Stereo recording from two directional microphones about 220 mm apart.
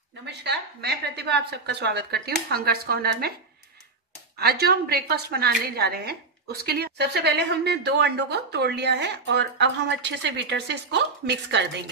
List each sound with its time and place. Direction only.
0.2 s a woman's voice: 50° right (ahead or behind)
4.4 s a woman's voice: 45° right (ahead or behind)